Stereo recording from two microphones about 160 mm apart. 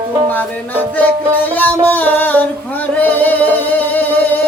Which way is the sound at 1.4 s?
10° left (ahead or behind).